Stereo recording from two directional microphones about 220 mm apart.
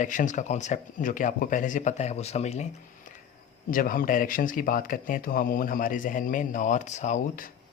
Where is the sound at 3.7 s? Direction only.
40° left (ahead or behind).